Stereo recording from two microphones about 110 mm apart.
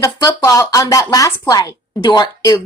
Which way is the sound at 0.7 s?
30° left (ahead or behind).